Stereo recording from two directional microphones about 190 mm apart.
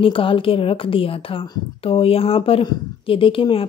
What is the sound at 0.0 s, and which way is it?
A woman's voice, 30° left (ahead or behind).